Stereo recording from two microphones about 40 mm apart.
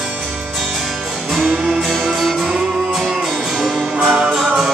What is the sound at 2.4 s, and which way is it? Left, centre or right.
Music, centre.